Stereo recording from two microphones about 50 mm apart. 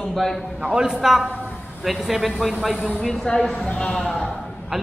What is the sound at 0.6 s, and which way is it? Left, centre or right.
A man's voice, centre.